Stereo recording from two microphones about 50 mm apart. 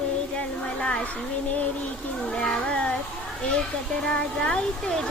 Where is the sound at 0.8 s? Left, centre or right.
Centre.